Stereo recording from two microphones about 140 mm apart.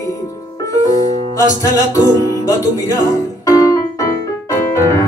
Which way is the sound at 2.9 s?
25° left (ahead or behind).